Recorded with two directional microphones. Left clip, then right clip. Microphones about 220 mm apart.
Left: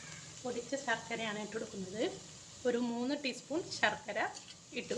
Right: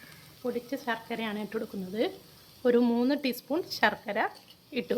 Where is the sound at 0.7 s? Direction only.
50° right (ahead or behind).